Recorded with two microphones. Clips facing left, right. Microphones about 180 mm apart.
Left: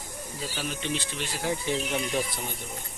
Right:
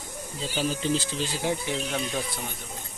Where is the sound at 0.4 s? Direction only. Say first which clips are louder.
Right 6 dB; 20° right (ahead or behind).